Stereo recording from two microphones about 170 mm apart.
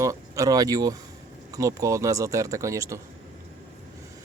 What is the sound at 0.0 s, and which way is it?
Speech, 20° right (ahead or behind).